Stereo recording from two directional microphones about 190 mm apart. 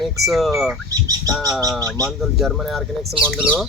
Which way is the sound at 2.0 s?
Centre (ahead or behind).